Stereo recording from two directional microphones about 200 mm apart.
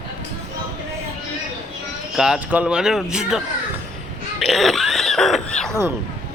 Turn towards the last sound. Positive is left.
turn(degrees=5)  # may be behind; listen again after turning